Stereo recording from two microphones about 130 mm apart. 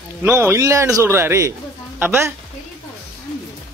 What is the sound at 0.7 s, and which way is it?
Speech, 25° right (ahead or behind).